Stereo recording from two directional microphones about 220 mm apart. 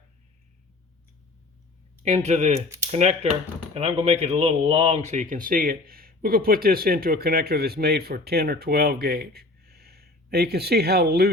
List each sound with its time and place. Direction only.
2.0 s speech: 30° right (ahead or behind)
2.6 s speech: 10° right (ahead or behind)
2.9 s speech: 30° right (ahead or behind); by 11.3 s 45° right (ahead or behind)